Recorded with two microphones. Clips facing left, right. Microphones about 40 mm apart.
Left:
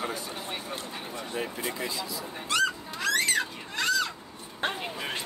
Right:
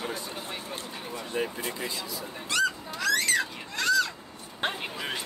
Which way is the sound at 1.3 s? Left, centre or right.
Centre.